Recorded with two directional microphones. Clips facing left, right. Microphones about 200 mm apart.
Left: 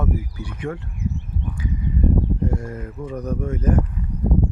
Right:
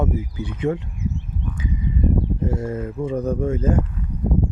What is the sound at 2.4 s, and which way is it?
Speech, 25° right (ahead or behind).